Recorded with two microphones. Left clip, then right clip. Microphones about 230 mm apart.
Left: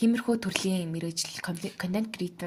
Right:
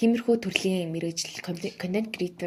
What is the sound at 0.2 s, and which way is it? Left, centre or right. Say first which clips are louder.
Speech: right 4 dB; left.